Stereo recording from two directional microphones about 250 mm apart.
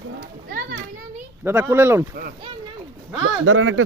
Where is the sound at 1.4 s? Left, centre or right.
Centre.